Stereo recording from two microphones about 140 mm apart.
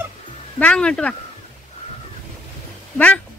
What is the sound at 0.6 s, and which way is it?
Speech, 10° left (ahead or behind).